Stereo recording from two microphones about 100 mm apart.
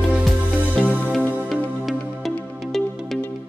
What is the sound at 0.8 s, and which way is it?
Music, 5° left (ahead or behind).